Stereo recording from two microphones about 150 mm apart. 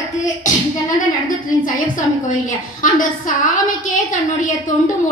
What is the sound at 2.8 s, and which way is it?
A woman's voice, 60° left (ahead or behind).